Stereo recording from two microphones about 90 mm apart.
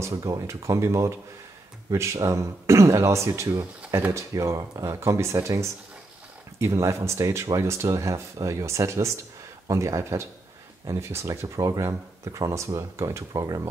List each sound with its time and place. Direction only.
0.0 s speech: 40° right (ahead or behind)